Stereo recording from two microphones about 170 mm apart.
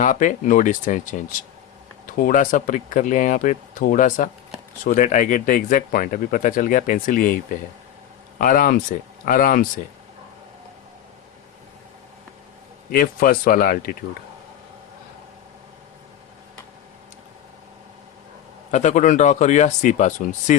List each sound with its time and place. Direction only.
0.0 s speech: 50° left (ahead or behind)
12.9 s speech: 55° left (ahead or behind)
18.7 s speech: 45° left (ahead or behind)